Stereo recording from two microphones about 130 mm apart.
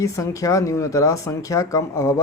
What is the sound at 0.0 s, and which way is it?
Speech, 25° left (ahead or behind).